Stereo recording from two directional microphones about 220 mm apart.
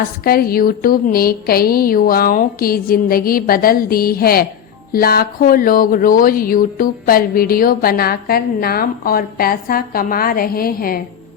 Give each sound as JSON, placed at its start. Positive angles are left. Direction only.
{"t": 0.3, "sound": "speech", "side_deg": 45}